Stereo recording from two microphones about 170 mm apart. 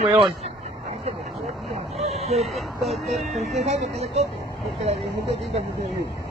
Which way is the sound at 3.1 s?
40° right (ahead or behind).